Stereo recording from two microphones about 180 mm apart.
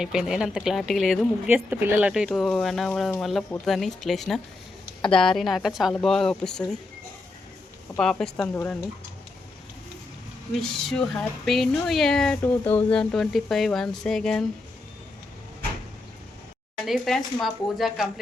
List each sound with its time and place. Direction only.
0.0 s speech: 5° right (ahead or behind)
7.9 s speech: 5° left (ahead or behind)
8.5 s speech: 15° left (ahead or behind)
10.6 s speech: 5° left (ahead or behind)
16.8 s speech: centre (ahead or behind)